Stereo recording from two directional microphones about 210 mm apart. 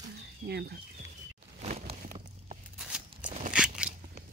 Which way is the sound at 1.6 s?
30° right (ahead or behind).